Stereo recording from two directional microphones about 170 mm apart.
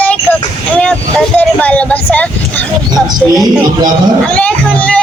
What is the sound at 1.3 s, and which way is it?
Speech, 10° left (ahead or behind).